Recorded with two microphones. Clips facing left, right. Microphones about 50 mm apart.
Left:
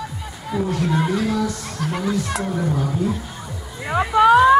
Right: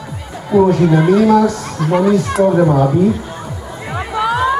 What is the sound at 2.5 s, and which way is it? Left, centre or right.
Speech, right.